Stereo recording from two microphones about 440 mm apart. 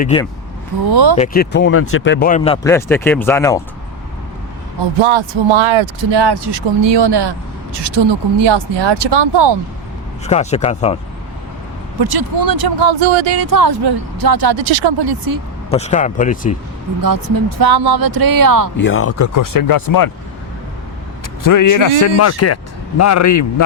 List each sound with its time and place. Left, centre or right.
0.0 s speech: centre
0.9 s speech: right
1.1 s speech: centre
4.9 s speech: right
10.2 s speech: centre
11.9 s speech: right
12.9 s speech: right
13.4 s speech: right
14.6 s speech: right
15.7 s speech: centre
17.0 s speech: right
18.8 s speech: left
21.4 s a man's voice: left